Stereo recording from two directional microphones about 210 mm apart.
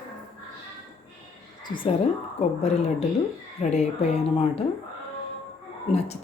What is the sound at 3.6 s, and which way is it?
Speech, 30° left (ahead or behind).